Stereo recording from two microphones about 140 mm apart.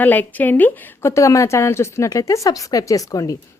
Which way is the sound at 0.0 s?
15° left (ahead or behind).